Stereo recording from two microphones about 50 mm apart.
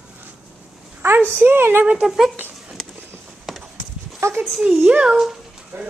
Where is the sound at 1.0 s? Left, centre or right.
Right.